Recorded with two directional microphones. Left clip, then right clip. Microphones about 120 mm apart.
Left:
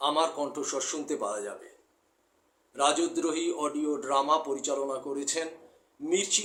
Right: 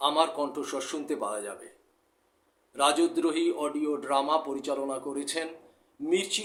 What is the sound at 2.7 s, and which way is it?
A man's voice, 15° right (ahead or behind).